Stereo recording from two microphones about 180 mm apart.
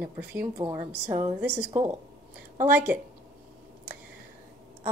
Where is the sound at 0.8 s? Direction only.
40° right (ahead or behind).